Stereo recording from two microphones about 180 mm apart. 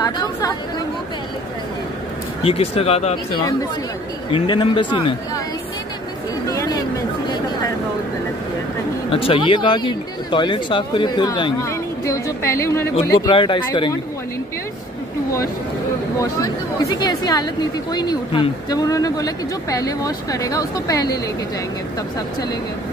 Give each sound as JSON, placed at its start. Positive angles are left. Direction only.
{"t": 0.0, "sound": "chatter", "side_deg": 20}
{"t": 2.4, "sound": "speech", "side_deg": 35}
{"t": 4.3, "sound": "speech", "side_deg": 30}
{"t": 6.4, "sound": "chatter", "side_deg": 20}
{"t": 9.1, "sound": "a woman's voice", "side_deg": 30}
{"t": 13.2, "sound": "speech", "side_deg": 25}
{"t": 16.2, "sound": "speech", "side_deg": 20}